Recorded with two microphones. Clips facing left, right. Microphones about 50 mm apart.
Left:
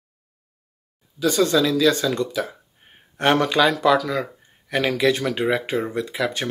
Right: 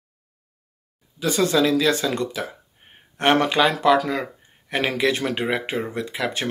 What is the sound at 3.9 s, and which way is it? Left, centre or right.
Speech, right.